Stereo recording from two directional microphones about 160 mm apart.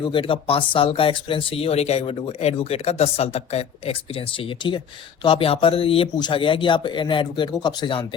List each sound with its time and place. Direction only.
0.1 s speech: 30° left (ahead or behind)